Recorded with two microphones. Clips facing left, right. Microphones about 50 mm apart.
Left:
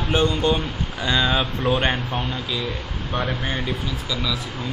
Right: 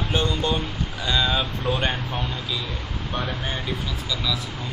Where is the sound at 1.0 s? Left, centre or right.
Left.